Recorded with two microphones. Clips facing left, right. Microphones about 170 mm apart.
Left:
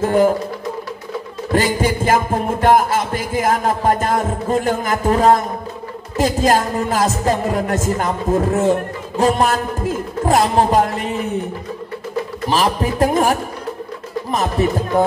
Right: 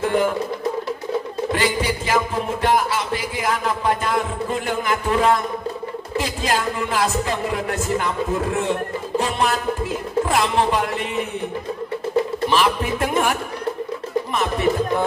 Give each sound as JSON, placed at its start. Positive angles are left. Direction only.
{"t": 0.0, "sound": "a man's voice", "side_deg": 40}
{"t": 1.5, "sound": "music", "side_deg": 45}
{"t": 12.4, "sound": "a man's voice", "side_deg": 40}